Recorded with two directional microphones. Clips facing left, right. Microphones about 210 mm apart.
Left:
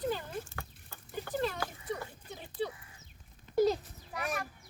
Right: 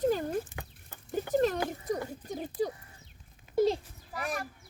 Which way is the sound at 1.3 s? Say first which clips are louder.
Right 7 dB; 45° right (ahead or behind).